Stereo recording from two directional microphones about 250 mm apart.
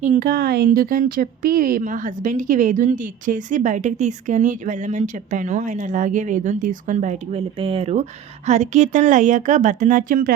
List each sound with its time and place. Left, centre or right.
0.0 s a woman's voice: right